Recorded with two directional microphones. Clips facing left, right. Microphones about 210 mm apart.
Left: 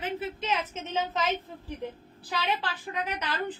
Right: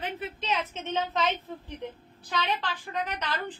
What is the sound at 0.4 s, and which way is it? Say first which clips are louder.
A woman's voice: even; centre (ahead or behind).